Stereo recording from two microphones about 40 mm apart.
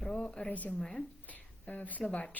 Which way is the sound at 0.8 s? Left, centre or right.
Centre.